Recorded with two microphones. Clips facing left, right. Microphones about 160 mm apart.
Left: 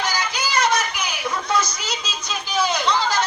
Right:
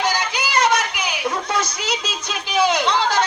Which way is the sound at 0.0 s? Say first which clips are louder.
Right 3 dB; 60° right (ahead or behind).